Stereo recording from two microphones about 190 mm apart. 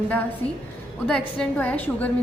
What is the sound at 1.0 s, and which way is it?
A woman's voice, 5° left (ahead or behind).